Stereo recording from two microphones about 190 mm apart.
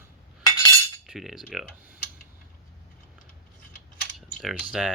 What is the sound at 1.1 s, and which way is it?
Cutlery, centre (ahead or behind).